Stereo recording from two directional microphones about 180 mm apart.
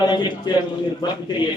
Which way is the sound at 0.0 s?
25° left (ahead or behind).